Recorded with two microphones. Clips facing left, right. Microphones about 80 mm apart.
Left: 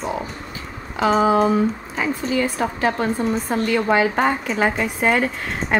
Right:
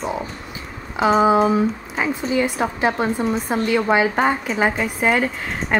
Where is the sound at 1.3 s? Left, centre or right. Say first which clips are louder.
Even; centre.